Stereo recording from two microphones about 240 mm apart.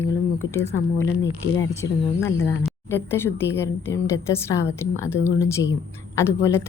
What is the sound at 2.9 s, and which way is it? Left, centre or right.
A woman's voice, centre.